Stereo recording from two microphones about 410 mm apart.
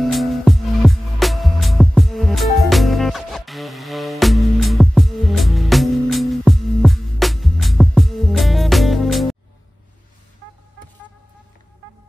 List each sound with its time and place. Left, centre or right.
0.0 s music: centre